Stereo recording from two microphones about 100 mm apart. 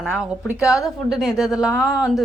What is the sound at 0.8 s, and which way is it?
Speech, centre (ahead or behind).